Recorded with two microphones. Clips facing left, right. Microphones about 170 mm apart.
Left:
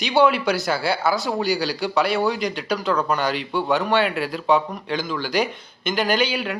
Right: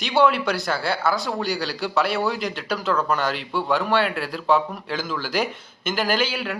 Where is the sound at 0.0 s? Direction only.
Centre (ahead or behind).